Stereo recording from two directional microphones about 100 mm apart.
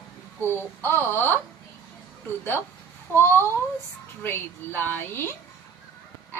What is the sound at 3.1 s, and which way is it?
A woman's voice, 20° left (ahead or behind).